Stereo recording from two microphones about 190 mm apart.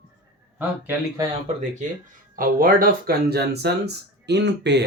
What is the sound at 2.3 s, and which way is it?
Speech, 45° right (ahead or behind).